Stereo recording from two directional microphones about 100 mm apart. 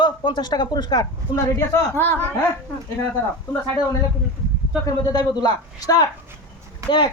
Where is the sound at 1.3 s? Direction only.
30° left (ahead or behind).